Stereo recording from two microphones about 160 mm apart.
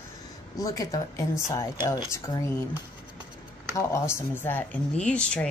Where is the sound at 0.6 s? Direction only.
20° left (ahead or behind).